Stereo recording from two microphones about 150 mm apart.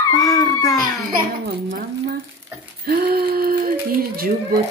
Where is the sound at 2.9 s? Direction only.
90° right.